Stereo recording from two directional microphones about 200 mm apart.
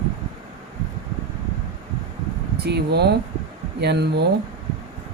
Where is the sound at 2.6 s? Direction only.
55° right (ahead or behind).